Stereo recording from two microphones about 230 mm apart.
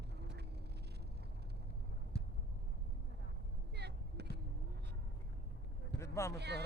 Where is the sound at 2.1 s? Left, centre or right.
Left.